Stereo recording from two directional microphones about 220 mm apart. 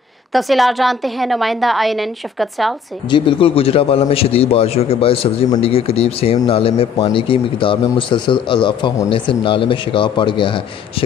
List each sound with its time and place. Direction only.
0.3 s a woman's voice: centre (ahead or behind)
3.1 s a man's voice: 25° left (ahead or behind)